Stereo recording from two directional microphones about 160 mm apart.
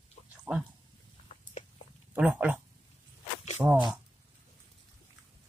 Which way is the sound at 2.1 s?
10° right (ahead or behind).